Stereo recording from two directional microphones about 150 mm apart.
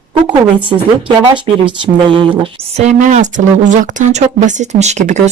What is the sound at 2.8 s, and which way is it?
A woman's voice, 55° right (ahead or behind).